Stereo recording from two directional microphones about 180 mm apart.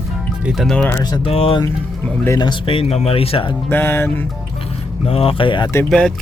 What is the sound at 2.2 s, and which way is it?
Speech, 20° left (ahead or behind).